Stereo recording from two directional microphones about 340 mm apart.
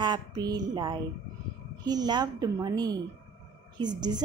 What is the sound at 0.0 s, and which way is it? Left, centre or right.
A woman's voice, centre.